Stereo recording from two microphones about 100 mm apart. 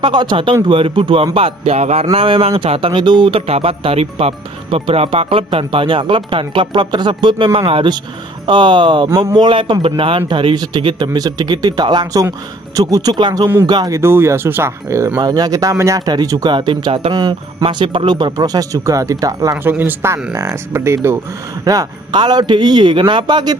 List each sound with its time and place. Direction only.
0.0 s speech: 50° right (ahead or behind); by 2.0 s 90° right
2.1 s speech: 70° right (ahead or behind)
8.5 s speech: 50° right (ahead or behind)
9.1 s speech: 35° right (ahead or behind)
9.4 s speech: 55° right (ahead or behind)
11.1 s speech: 40° right (ahead or behind)
13.9 s speech: 25° right (ahead or behind)
15.1 s speech: 40° right (ahead or behind)
16.5 s speech: 55° right (ahead or behind)
17.1 s speech: 40° right (ahead or behind)
19.6 s speech: 20° right (ahead or behind)
21.7 s speech: 40° right (ahead or behind)